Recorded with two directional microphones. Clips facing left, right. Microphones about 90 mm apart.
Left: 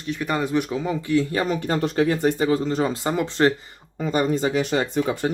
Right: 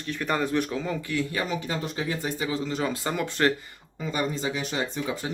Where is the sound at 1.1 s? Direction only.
35° left (ahead or behind).